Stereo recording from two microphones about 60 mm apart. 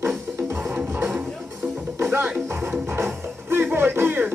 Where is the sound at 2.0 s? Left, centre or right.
Right.